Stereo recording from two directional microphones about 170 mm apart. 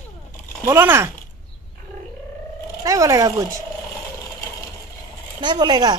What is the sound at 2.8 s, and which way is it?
Speech, 20° right (ahead or behind).